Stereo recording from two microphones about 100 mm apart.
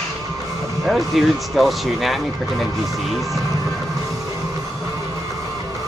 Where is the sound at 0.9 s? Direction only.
Centre (ahead or behind).